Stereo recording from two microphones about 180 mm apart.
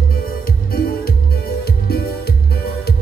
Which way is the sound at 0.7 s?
55° left (ahead or behind).